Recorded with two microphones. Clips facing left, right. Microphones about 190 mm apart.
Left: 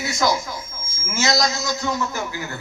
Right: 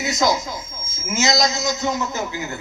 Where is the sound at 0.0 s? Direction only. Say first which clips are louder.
Right 2 dB; 20° right (ahead or behind).